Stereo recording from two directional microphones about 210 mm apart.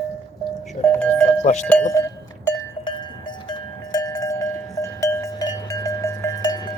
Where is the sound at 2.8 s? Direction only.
20° left (ahead or behind).